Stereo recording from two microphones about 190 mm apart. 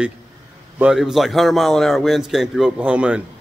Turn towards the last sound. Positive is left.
turn(degrees=-5)  # may be behind; listen again after turning